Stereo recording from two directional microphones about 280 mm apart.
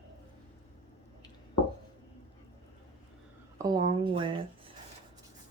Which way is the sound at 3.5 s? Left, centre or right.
Centre.